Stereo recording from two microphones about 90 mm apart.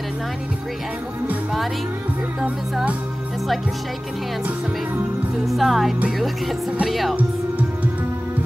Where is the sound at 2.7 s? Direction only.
10° right (ahead or behind).